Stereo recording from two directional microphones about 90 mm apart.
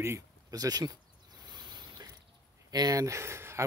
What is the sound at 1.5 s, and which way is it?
Mechanisms, 55° right (ahead or behind).